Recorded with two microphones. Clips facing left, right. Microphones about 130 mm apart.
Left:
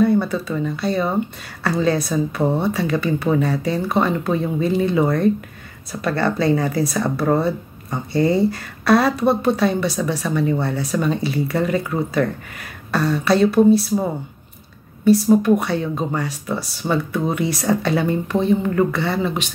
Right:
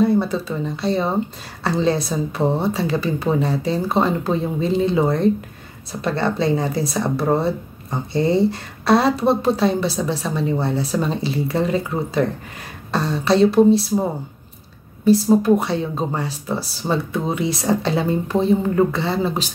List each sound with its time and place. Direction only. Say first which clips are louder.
0.0 s speech: even; 25° right (ahead or behind)
15.0 s speech: even; 25° right (ahead or behind)